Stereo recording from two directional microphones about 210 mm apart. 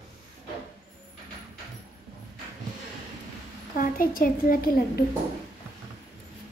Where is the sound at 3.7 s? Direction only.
40° left (ahead or behind).